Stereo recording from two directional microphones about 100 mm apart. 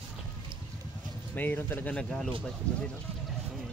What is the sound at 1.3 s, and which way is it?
Speech, 20° left (ahead or behind).